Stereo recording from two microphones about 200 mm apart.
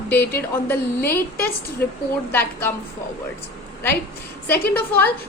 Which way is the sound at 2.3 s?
10° left (ahead or behind).